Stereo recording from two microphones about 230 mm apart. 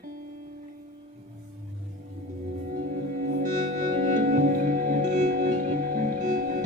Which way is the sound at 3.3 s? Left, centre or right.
Right.